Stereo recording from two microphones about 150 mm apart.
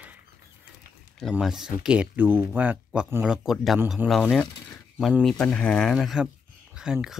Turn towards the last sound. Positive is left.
turn(degrees=-5)  # may be behind; listen again after turning